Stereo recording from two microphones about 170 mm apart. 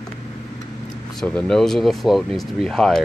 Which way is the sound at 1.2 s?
5° left (ahead or behind).